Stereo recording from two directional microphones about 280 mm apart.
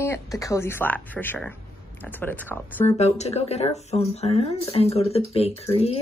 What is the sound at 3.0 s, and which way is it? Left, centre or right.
Speech, left.